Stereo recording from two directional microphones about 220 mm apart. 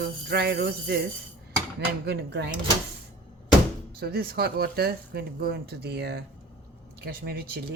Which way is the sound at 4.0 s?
45° right (ahead or behind).